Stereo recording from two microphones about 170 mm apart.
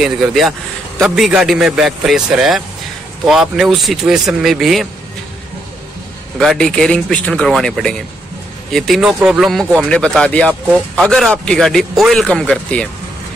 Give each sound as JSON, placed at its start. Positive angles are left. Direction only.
{"t": 0.0, "sound": "a man's voice", "side_deg": 0}
{"t": 6.3, "sound": "a man's voice", "side_deg": 0}